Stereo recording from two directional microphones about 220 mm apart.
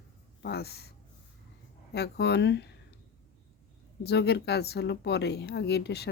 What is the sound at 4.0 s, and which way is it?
Speech, 50° left (ahead or behind).